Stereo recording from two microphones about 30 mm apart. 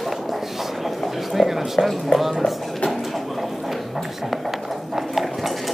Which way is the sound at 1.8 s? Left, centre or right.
Left.